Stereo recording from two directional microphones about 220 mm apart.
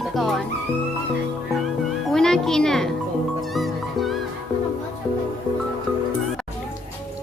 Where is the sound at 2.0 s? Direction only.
Centre (ahead or behind).